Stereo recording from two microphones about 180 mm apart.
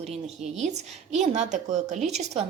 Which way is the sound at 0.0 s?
35° right (ahead or behind).